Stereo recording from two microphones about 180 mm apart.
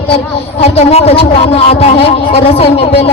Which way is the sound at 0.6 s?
35° left (ahead or behind).